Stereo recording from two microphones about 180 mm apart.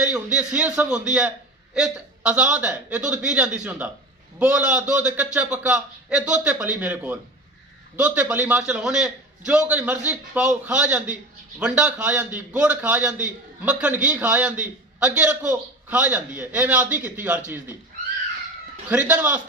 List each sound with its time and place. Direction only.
0.0 s a man's voice: 5° right (ahead or behind)
18.9 s a man's voice: 10° right (ahead or behind)